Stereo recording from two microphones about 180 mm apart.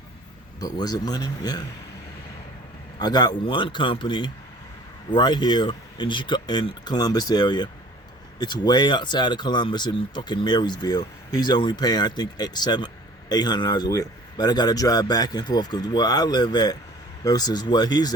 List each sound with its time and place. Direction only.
0.6 s speech: 20° left (ahead or behind)
3.0 s speech: 25° left (ahead or behind)